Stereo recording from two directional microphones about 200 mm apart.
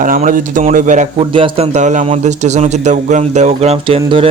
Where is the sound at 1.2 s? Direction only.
25° right (ahead or behind).